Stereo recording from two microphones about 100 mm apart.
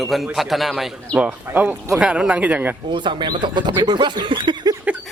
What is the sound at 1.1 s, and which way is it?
Speech, 15° right (ahead or behind).